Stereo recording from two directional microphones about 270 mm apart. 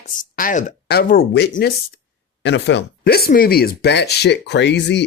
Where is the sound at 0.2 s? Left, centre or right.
Left.